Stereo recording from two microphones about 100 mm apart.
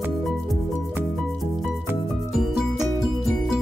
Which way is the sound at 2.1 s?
5° right (ahead or behind).